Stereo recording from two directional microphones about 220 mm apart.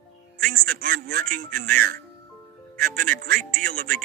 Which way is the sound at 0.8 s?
40° right (ahead or behind).